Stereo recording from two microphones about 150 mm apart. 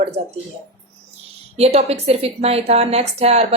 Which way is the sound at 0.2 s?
45° right (ahead or behind).